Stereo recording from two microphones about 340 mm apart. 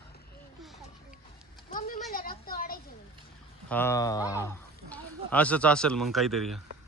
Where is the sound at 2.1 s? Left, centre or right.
Left.